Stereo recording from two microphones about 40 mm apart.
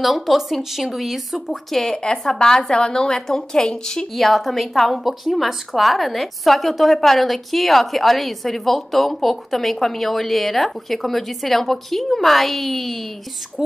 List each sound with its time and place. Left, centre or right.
0.0 s a woman's voice: centre
1.7 s a woman's voice: centre
2.0 s a woman's voice: centre
4.1 s a woman's voice: centre